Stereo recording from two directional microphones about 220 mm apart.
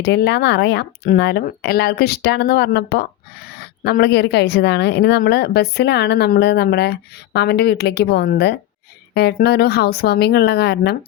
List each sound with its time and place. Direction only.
0.0 s speech: 50° left (ahead or behind)